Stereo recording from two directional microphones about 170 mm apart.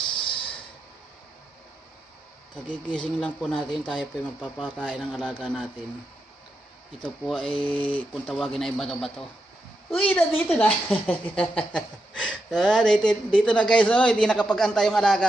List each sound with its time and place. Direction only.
0.1 s a sound: 30° left (ahead or behind)
2.9 s speech: 5° left (ahead or behind)
7.2 s a woman's voice: centre (ahead or behind)